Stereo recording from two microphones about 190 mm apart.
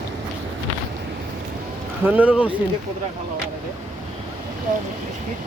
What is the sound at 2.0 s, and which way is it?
Speech, 10° right (ahead or behind).